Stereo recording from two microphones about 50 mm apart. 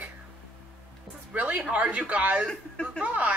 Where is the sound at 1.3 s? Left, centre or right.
Right.